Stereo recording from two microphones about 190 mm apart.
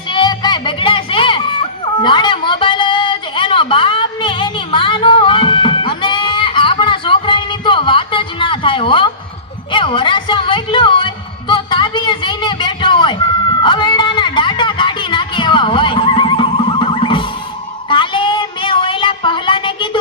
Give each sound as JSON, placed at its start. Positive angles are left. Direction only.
{"t": 0.1, "sound": "music", "side_deg": 25}
{"t": 9.7, "sound": "a sound", "side_deg": 25}
{"t": 13.6, "sound": "music", "side_deg": 25}
{"t": 17.8, "sound": "child singing", "side_deg": 25}